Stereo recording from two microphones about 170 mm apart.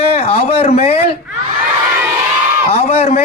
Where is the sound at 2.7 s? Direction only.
35° left (ahead or behind).